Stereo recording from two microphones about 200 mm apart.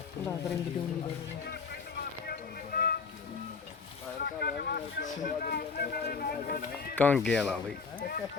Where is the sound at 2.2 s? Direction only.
50° left (ahead or behind).